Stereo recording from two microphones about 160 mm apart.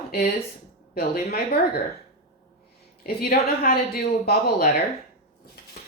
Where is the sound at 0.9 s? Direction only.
75° left (ahead or behind).